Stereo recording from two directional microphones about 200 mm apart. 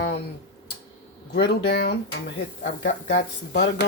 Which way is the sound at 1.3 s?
55° left (ahead or behind).